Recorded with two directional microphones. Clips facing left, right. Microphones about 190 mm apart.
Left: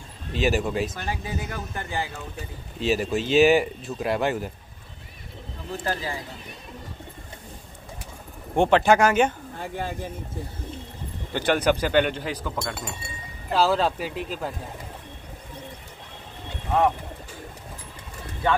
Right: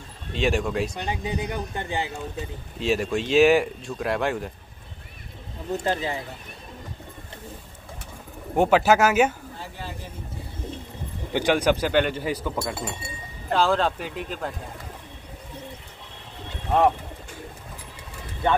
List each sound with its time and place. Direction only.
0.3 s speech: 5° left (ahead or behind)
0.9 s speech: 20° right (ahead or behind)
2.8 s speech: centre (ahead or behind)
5.9 s speech: 25° right (ahead or behind)
8.5 s speech: 5° right (ahead or behind)
9.6 s speech: 55° left (ahead or behind)
11.3 s speech: 10° right (ahead or behind); by 14.5 s 5° left (ahead or behind)